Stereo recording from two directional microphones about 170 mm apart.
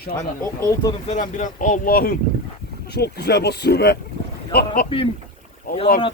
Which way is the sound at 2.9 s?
70° left (ahead or behind).